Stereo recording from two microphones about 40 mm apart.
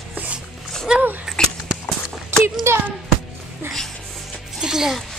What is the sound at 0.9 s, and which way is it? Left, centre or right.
Speech, right.